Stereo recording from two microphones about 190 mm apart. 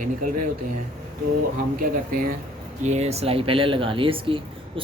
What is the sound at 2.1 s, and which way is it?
Speech, 45° right (ahead or behind).